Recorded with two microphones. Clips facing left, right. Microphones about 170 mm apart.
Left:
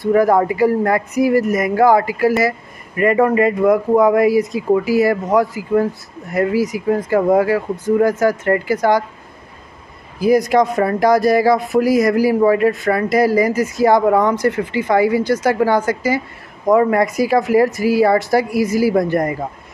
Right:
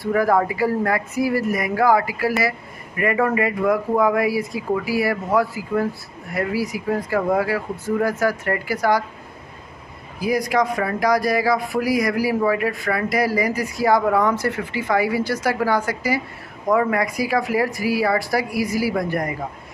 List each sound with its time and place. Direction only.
0.0 s speech: 20° left (ahead or behind)
10.2 s speech: 25° left (ahead or behind)
16.7 s speech: 35° left (ahead or behind)
17.0 s speech: 20° left (ahead or behind)